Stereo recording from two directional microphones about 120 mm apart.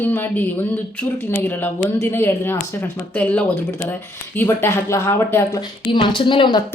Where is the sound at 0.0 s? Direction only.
15° left (ahead or behind).